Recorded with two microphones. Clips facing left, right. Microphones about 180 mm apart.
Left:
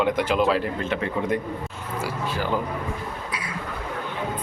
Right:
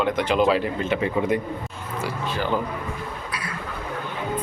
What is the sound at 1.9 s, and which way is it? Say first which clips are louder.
Speech: right 1 dB; 10° left (ahead or behind).